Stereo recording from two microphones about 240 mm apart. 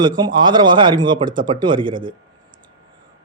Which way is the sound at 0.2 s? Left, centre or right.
Centre.